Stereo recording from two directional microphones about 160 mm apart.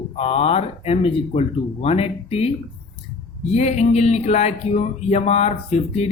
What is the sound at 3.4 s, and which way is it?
Speech, 45° left (ahead or behind).